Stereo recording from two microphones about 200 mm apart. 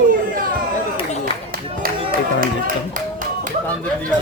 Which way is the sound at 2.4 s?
45° right (ahead or behind).